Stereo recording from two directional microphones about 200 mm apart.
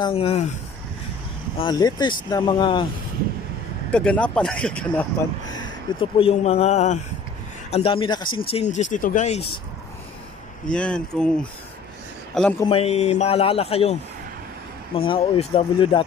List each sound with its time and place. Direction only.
0.0 s speech: 30° left (ahead or behind)
1.6 s speech: 20° left (ahead or behind)
3.9 s speech: 5° left (ahead or behind)
5.5 s speech: 25° left (ahead or behind)
10.7 s a man's voice: 5° left (ahead or behind)
12.6 s speech: 30° left (ahead or behind)
15.0 s speech: 30° left (ahead or behind)